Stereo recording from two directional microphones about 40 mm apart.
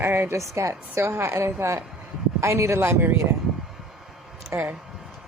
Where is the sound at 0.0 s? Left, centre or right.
Right.